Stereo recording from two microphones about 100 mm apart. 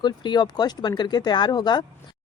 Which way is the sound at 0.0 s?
45° left (ahead or behind).